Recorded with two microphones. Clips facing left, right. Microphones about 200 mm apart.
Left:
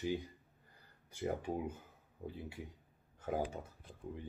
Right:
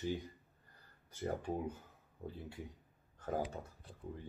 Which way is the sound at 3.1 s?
10° left (ahead or behind).